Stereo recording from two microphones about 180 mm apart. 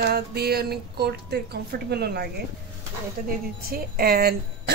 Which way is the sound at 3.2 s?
50° right (ahead or behind).